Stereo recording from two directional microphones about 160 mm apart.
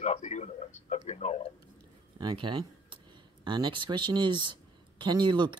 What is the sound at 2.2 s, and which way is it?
Speech, 30° right (ahead or behind).